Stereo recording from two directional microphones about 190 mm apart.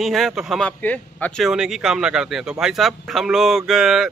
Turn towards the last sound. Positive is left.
turn(degrees=0)  # may be behind; listen again after turning